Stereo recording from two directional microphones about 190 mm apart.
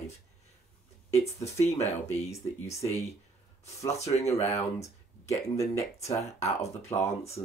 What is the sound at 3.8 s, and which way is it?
Speech, 35° left (ahead or behind).